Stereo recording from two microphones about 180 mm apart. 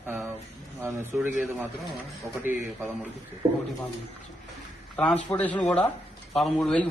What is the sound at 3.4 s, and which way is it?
Speech, 15° right (ahead or behind).